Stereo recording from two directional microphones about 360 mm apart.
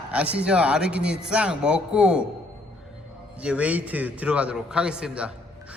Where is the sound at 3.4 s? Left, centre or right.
Centre.